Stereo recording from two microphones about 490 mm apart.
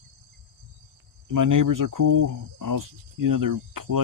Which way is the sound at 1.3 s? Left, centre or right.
Right.